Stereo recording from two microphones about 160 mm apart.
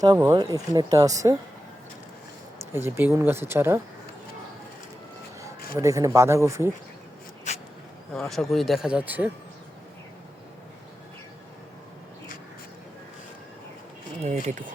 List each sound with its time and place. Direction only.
0.0 s speech: 20° right (ahead or behind)
2.7 s speech: 15° right (ahead or behind)
5.4 s speech: 20° right (ahead or behind)
7.5 s insect: 45° left (ahead or behind)
8.1 s speech: 5° left (ahead or behind)
14.2 s speech: 45° right (ahead or behind)